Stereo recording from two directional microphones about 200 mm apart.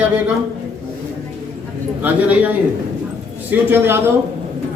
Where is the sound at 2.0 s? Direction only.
10° right (ahead or behind).